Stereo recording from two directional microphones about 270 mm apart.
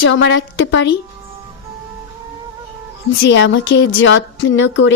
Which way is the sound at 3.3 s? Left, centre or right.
Left.